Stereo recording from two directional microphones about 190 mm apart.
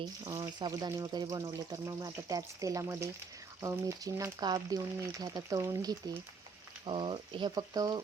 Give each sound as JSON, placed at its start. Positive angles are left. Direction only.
{"t": 0.0, "sound": "speech", "side_deg": -20}